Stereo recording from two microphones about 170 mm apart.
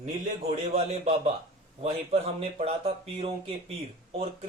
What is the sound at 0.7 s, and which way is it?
Speech, 40° right (ahead or behind).